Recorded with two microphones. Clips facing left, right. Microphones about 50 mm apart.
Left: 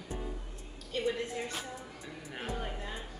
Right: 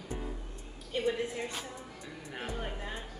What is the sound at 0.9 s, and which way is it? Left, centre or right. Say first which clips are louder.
Speech: right 1 dB; centre.